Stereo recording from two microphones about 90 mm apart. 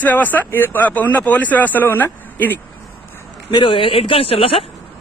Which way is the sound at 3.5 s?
65° left (ahead or behind).